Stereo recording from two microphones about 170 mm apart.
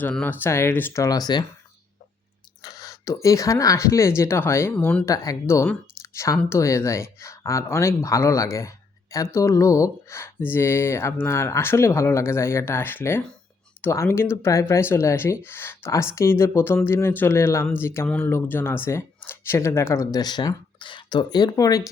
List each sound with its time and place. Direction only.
0.0 s speech: 10° left (ahead or behind)
2.6 s speech: 20° left (ahead or behind)